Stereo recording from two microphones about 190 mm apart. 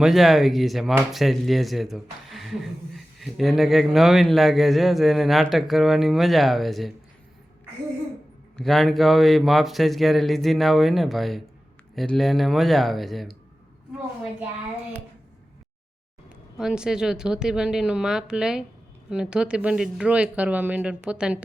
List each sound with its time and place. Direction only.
0.0 s speech: centre (ahead or behind)
8.5 s speech: centre (ahead or behind)
16.6 s speech: 5° right (ahead or behind)